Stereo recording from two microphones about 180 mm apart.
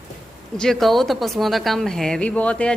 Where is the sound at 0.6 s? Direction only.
Centre (ahead or behind).